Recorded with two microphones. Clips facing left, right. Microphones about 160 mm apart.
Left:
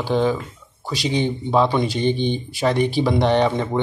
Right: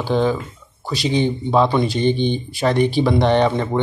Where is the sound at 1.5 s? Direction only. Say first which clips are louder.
Right 1 dB; 5° left (ahead or behind).